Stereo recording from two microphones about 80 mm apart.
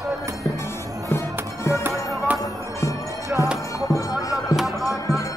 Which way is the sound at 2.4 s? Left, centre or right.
Left.